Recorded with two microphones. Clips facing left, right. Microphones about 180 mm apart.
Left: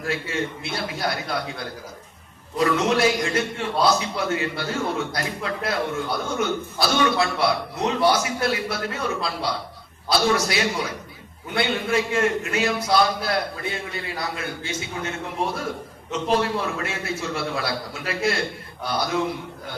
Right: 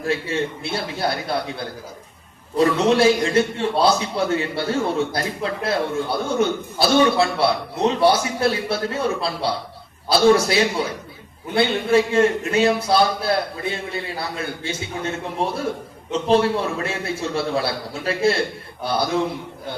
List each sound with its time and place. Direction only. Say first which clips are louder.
0.0 s a man's voice: right 4 dB; 30° right (ahead or behind)